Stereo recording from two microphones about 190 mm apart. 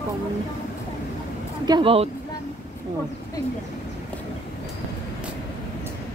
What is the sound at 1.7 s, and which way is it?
Speech, 30° right (ahead or behind).